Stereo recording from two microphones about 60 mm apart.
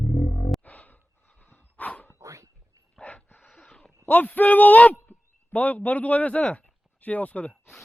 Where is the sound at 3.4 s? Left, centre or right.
Centre.